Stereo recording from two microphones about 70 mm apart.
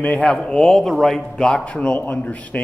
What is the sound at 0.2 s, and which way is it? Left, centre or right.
A man's voice, centre.